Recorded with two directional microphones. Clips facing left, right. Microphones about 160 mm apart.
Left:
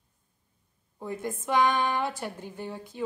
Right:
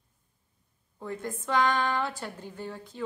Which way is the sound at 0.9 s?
15° left (ahead or behind).